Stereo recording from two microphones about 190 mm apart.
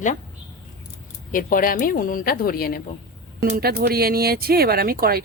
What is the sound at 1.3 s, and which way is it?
A woman's voice, 45° left (ahead or behind).